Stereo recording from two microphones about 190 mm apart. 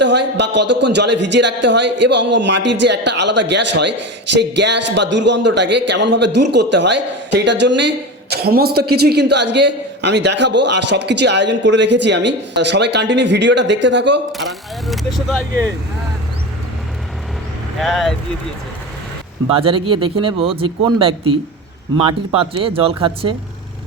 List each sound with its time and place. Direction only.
0.0 s a man's voice: 65° right (ahead or behind)
14.3 s speech: centre (ahead or behind)
17.7 s speech: centre (ahead or behind)
19.5 s speech: 30° right (ahead or behind)